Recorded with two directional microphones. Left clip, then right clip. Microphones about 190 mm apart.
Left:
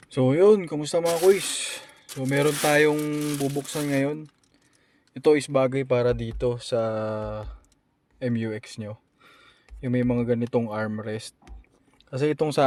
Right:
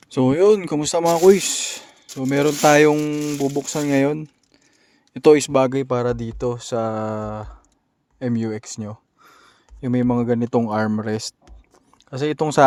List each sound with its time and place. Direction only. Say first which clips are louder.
0.0 s speech: right 3 dB; 45° right (ahead or behind)
12.1 s speech: right 4 dB; 20° right (ahead or behind)